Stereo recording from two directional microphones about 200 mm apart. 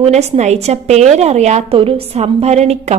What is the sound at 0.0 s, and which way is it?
A woman's voice, 35° right (ahead or behind).